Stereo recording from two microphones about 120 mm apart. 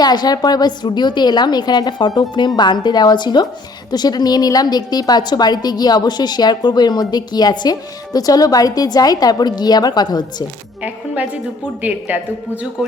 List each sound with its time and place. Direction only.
0.0 s a woman's voice: 35° left (ahead or behind)
10.8 s a woman's voice: 10° right (ahead or behind)